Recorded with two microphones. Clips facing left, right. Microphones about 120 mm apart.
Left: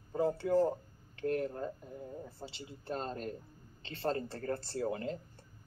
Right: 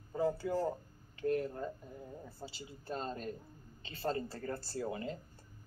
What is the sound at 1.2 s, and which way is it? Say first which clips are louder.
Speech: even; 50° left (ahead or behind).